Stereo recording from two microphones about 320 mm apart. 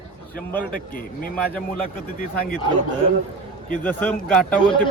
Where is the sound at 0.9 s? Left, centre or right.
Left.